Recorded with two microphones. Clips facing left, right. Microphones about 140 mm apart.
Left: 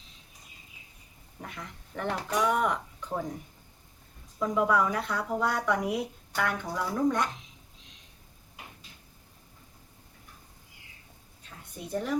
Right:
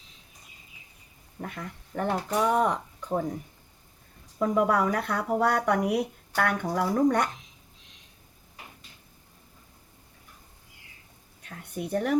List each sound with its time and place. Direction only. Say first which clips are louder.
1.4 s speech: right 5 dB; 50° right (ahead or behind)
2.3 s speech: right 2 dB; 30° right (ahead or behind)
4.5 s speech: right 1 dB; 55° right (ahead or behind)
11.4 s speech: right 8 dB; 65° right (ahead or behind)